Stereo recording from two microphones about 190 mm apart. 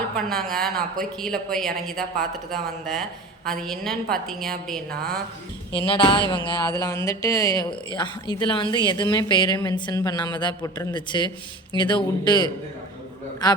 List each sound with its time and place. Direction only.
0.2 s a woman's voice: centre (ahead or behind)
5.8 s speech: 25° left (ahead or behind)